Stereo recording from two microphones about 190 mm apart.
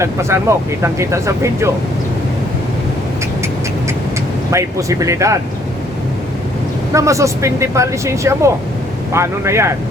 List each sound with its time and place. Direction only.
0.0 s speech: 15° right (ahead or behind)
4.5 s speech: 15° right (ahead or behind)
6.9 s speech: 15° right (ahead or behind)